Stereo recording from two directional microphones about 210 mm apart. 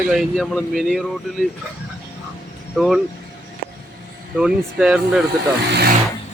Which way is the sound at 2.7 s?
Centre (ahead or behind).